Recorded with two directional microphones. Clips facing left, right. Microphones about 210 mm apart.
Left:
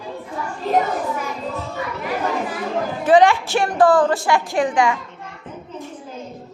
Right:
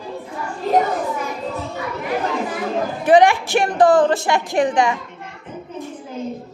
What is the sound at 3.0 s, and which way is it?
A woman's voice, 15° right (ahead or behind).